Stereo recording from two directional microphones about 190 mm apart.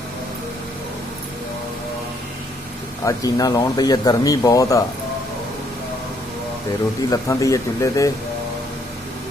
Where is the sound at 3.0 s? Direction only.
20° left (ahead or behind).